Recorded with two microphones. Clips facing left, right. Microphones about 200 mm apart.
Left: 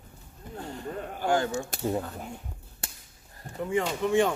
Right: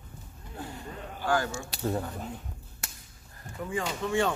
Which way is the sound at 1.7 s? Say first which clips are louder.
Left 1 dB; 50° left (ahead or behind).